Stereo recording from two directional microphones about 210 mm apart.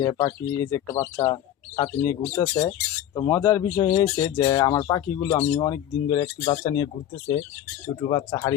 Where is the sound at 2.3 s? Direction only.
10° left (ahead or behind).